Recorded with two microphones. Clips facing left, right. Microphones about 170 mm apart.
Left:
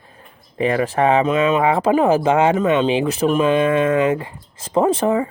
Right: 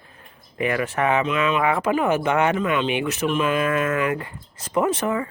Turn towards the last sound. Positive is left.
turn(degrees=30)  # may be behind; listen again after turning